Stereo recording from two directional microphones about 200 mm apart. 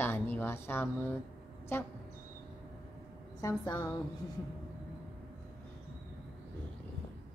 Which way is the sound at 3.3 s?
15° left (ahead or behind).